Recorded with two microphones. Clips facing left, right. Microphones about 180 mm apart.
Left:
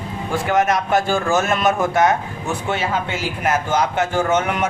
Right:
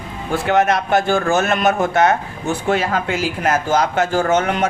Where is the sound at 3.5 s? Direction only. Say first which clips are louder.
Right 2 dB; 40° right (ahead or behind).